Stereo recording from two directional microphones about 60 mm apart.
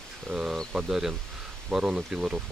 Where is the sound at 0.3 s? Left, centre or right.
Centre.